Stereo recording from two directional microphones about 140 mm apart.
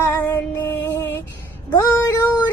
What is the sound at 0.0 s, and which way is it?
Music, 15° left (ahead or behind).